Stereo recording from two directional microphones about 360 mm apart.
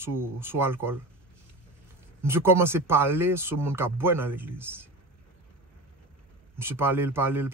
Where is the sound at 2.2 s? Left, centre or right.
Centre.